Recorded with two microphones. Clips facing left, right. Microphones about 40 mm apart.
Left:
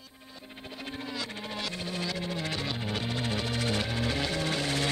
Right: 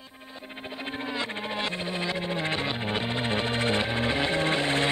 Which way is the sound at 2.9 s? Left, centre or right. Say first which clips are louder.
Right 4 dB; right.